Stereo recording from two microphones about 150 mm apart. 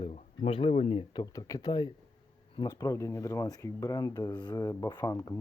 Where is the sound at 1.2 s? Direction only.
25° left (ahead or behind).